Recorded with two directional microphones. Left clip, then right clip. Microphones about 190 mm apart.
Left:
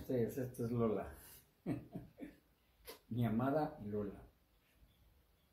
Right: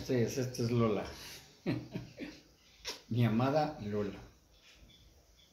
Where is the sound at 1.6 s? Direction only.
15° right (ahead or behind).